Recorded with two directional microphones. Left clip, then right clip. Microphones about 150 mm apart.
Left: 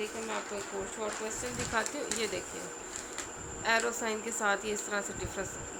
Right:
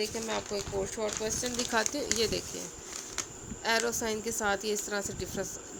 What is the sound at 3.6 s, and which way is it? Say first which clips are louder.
Speech: even; 50° right (ahead or behind).